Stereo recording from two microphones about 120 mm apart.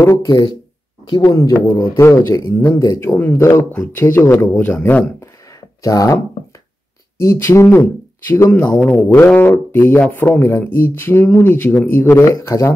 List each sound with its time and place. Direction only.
0.0 s a man's voice: 25° left (ahead or behind)
5.8 s speech: 30° left (ahead or behind)
7.2 s a man's voice: 25° left (ahead or behind)